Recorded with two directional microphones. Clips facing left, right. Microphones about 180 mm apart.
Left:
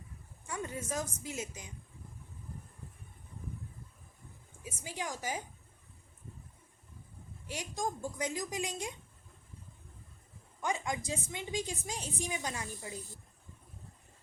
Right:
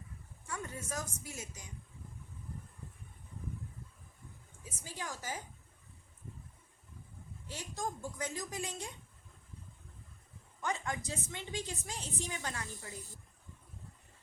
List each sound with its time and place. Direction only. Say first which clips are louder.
0.4 s a woman's voice: left 4 dB; 20° left (ahead or behind)
4.6 s a woman's voice: left 4 dB; 15° left (ahead or behind)
7.4 s a woman's voice: left 3 dB; 15° left (ahead or behind)
10.6 s a woman's voice: left 2 dB; 15° left (ahead or behind)